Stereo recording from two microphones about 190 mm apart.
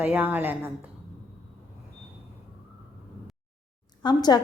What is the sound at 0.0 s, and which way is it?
Speech, 10° right (ahead or behind).